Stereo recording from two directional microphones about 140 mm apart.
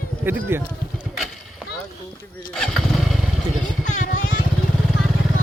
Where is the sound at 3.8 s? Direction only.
65° left (ahead or behind).